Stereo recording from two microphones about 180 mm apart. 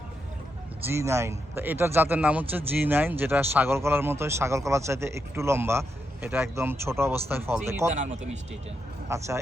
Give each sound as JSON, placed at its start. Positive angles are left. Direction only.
{"t": 0.9, "sound": "speech", "side_deg": -15}
{"t": 7.9, "sound": "speech", "side_deg": -40}
{"t": 9.0, "sound": "speech", "side_deg": -15}